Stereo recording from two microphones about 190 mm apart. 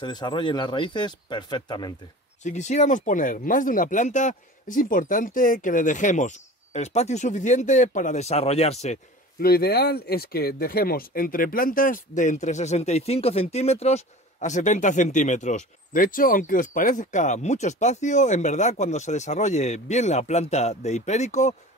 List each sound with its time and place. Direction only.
0.0 s speech: 25° left (ahead or behind)
2.4 s speech: 35° left (ahead or behind)
9.4 s speech: 55° left (ahead or behind); by 21.5 s 35° left (ahead or behind)